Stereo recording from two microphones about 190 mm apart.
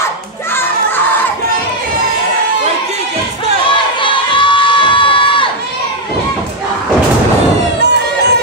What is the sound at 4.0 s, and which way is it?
Crowd, 25° left (ahead or behind).